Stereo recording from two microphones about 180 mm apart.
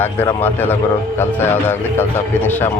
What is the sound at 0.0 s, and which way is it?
Speech, 10° left (ahead or behind).